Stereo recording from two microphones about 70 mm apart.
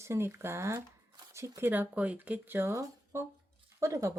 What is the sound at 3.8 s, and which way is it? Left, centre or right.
Speech, right.